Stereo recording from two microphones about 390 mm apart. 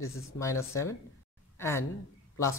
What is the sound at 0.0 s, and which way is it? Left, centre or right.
Speech, left.